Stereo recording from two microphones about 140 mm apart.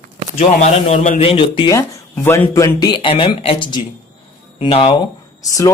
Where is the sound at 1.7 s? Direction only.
20° left (ahead or behind).